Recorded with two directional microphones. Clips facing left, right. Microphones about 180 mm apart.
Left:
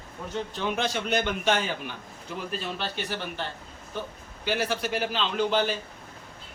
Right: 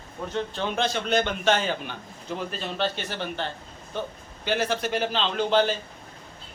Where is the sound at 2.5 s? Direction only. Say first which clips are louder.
Right 3 dB; 10° left (ahead or behind).